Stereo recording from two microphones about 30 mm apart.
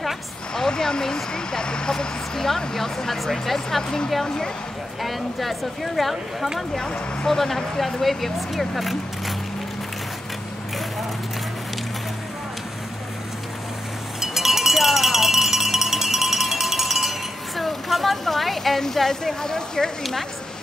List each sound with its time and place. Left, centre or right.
0.6 s speech: left
5.0 s speech: centre
7.2 s speech: centre
14.2 s cowbell: centre
18.8 s speech: centre
20.0 s speech: centre